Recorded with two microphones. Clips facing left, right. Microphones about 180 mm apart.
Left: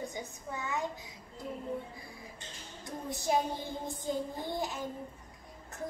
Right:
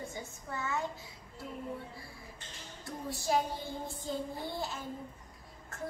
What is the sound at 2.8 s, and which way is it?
Music, 20° left (ahead or behind).